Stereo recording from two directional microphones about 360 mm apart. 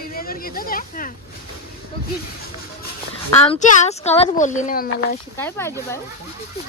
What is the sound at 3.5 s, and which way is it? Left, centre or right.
Speech, centre.